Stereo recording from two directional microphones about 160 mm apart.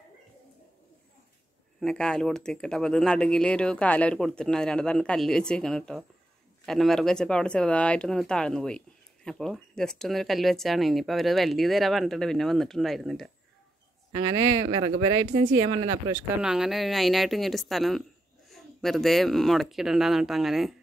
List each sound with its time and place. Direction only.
1.8 s speech: 5° left (ahead or behind)
14.9 s speech: 40° right (ahead or behind)
16.3 s speech: 5° right (ahead or behind)